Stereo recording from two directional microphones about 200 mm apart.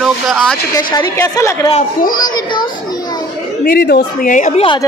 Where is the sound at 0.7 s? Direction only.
20° left (ahead or behind).